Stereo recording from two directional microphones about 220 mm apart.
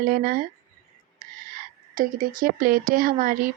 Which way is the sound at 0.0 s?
40° right (ahead or behind).